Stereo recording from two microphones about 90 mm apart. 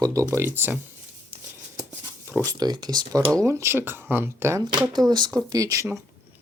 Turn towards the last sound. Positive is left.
turn(degrees=-40)  # may be behind; listen again after turning